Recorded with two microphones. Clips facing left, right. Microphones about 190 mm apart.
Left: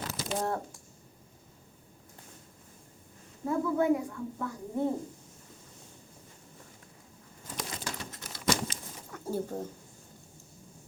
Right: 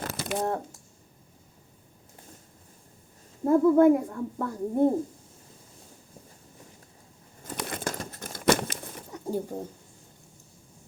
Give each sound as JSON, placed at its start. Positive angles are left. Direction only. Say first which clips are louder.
{"t": 0.0, "sound": "a sound", "louder": "right 3 dB", "side_deg": -65}
{"t": 0.4, "sound": "speech", "louder": "right 3 dB", "side_deg": -25}
{"t": 3.4, "sound": "a child's voice", "louder": "right 9 dB", "side_deg": -50}
{"t": 7.5, "sound": "crumpling", "louder": "right 6 dB", "side_deg": -60}
{"t": 9.1, "sound": "speech", "louder": "right 2 dB", "side_deg": -15}